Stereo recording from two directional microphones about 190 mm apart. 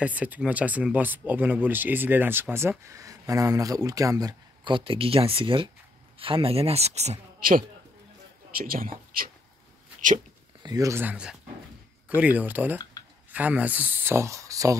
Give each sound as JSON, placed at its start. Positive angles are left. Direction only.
{"t": 0.0, "sound": "speech", "side_deg": -10}
{"t": 10.6, "sound": "speech", "side_deg": -20}